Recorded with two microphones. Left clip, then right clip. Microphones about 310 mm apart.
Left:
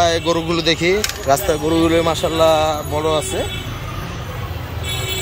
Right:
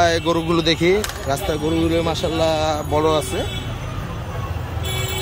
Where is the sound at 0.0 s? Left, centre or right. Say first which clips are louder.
Left 1 dB; centre.